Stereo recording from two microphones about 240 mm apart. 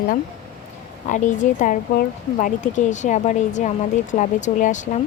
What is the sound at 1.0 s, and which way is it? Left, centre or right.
Speech, left.